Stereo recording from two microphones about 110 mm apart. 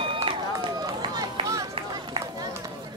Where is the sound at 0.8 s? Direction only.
35° right (ahead or behind).